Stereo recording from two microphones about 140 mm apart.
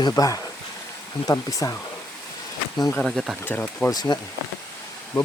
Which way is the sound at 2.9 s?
Centre (ahead or behind).